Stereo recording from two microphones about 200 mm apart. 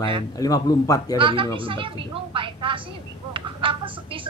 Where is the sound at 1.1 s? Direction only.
25° right (ahead or behind).